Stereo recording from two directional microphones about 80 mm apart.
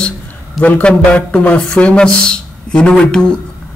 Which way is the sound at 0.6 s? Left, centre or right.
Centre.